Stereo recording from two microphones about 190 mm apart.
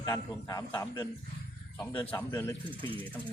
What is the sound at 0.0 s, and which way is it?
A man's voice, 20° left (ahead or behind).